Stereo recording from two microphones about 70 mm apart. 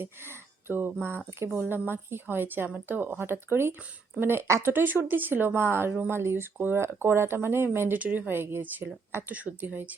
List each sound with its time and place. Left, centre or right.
0.0 s speech: right
7.9 s speech: right
8.3 s speech: right